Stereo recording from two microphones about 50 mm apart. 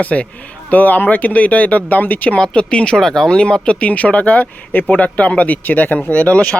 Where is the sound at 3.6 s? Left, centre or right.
Left.